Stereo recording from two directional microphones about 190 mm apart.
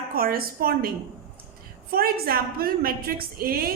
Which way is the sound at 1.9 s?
50° right (ahead or behind).